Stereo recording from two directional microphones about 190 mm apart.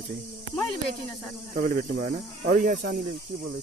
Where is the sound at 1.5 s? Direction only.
45° right (ahead or behind).